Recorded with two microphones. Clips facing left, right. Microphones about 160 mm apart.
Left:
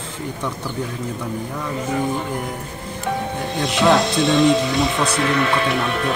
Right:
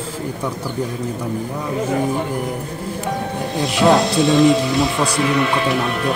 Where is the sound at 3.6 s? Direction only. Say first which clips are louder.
Right 2 dB; centre (ahead or behind).